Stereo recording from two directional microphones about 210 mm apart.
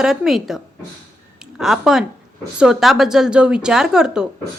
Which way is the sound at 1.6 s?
Centre (ahead or behind).